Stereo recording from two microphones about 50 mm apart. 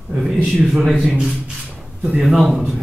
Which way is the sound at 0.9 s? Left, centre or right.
Centre.